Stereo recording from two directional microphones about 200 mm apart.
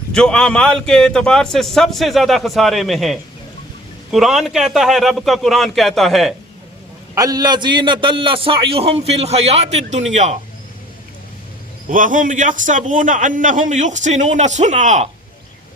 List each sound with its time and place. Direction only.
0.1 s a man's voice: 5° left (ahead or behind)
7.2 s a man's voice: 20° right (ahead or behind); by 10.3 s 35° right (ahead or behind)
11.9 s a man's voice: 40° right (ahead or behind)